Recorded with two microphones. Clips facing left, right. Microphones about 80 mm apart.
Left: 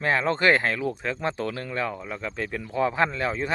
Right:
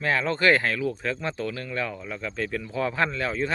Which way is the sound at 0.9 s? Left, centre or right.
Centre.